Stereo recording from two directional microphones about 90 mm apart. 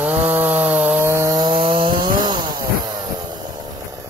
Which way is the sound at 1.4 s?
65° right (ahead or behind).